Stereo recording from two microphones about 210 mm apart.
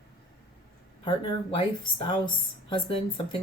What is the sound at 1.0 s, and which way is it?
Speech, 25° left (ahead or behind).